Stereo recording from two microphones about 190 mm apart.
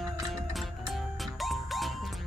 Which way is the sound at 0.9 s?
Centre (ahead or behind).